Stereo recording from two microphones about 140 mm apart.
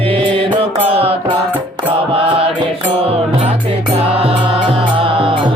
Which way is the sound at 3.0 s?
45° right (ahead or behind).